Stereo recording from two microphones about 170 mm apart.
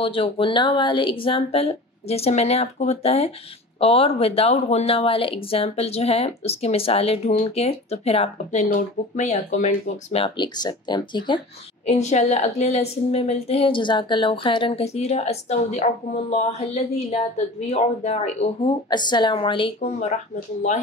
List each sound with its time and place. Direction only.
0.0 s speech: 30° left (ahead or behind)
11.9 s speech: 40° left (ahead or behind)
18.9 s speech: 25° left (ahead or behind)